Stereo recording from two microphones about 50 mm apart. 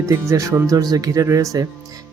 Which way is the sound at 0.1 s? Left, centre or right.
Right.